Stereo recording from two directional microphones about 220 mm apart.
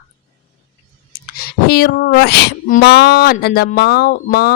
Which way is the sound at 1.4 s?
45° left (ahead or behind).